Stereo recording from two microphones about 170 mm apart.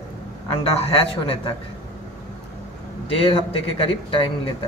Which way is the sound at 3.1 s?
35° left (ahead or behind).